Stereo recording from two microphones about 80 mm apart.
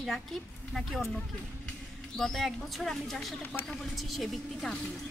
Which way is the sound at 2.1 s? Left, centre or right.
Centre.